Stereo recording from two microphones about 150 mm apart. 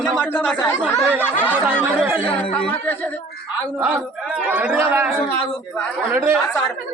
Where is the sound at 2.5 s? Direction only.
10° left (ahead or behind).